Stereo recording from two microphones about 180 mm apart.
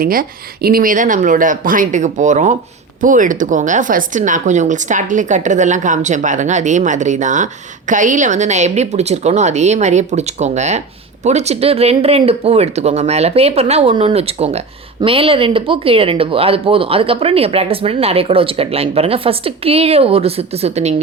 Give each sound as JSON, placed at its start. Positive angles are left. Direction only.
{"t": 0.0, "sound": "speech", "side_deg": -55}